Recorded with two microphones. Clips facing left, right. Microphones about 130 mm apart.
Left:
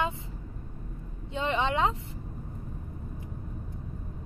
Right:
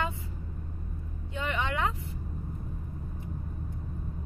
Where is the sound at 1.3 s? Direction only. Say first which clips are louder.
Left 4 dB; 25° left (ahead or behind).